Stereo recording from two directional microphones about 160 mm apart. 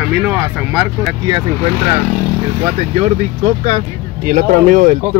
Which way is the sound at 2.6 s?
45° right (ahead or behind).